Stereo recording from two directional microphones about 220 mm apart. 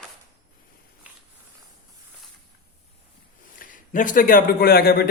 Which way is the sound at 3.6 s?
35° left (ahead or behind).